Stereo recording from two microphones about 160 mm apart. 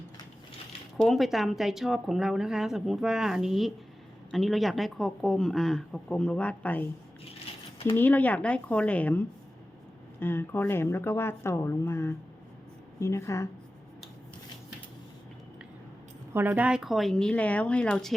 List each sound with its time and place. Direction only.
0.9 s a woman's voice: centre (ahead or behind)
7.9 s speech: 10° left (ahead or behind)
16.3 s a woman's voice: 10° right (ahead or behind); by 18.1 s 5° left (ahead or behind)